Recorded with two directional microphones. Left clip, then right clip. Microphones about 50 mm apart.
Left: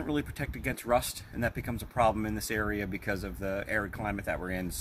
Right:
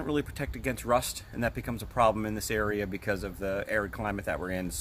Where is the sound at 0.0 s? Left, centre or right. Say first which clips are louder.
Right 2 dB; right.